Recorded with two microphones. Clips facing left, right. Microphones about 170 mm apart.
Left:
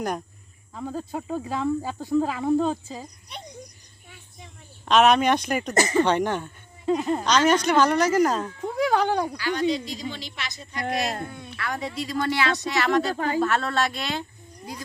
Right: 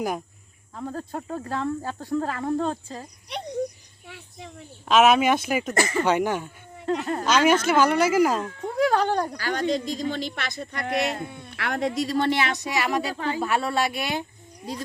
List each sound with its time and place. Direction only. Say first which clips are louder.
0.8 s speech: left 1 dB; 5° left (ahead or behind)
4.0 s a sound: right 6 dB; 70° right (ahead or behind)
4.9 s speech: even; 5° right (ahead or behind)
5.7 s speech: left 6 dB; 20° left (ahead or behind)
6.1 s speech: even; 10° right (ahead or behind)
6.8 s speech: left 2 dB; 10° left (ahead or behind)
7.3 s speech: right 1 dB; 10° right (ahead or behind)
9.4 s speech: left 1 dB; 45° right (ahead or behind)
11.3 s speech: left 2 dB; centre (ahead or behind)
11.5 s speech: right 4 dB; 65° right (ahead or behind)
11.9 s speech: right 1 dB; 35° right (ahead or behind); by 13.1 s 10° right (ahead or behind)
13.1 s speech: left 3 dB; 40° left (ahead or behind)
13.4 s speech: right 2 dB; 10° right (ahead or behind)